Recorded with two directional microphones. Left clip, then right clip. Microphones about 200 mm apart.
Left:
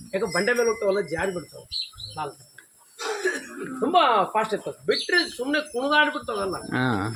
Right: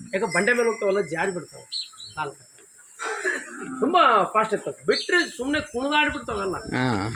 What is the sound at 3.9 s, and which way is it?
Speech, 40° right (ahead or behind).